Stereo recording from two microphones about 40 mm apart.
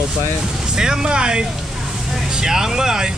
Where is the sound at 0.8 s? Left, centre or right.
Centre.